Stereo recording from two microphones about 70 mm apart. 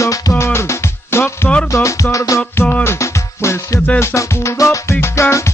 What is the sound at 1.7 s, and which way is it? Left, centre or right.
Music, left.